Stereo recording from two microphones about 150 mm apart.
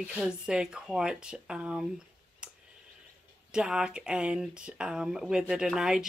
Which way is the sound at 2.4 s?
5° right (ahead or behind).